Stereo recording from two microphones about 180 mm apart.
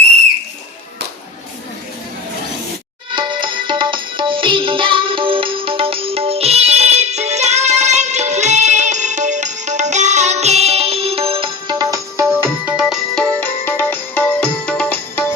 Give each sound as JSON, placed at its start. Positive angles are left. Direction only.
{"t": 3.2, "sound": "music", "side_deg": -25}